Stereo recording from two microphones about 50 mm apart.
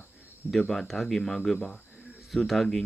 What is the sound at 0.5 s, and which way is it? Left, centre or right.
Speech, centre.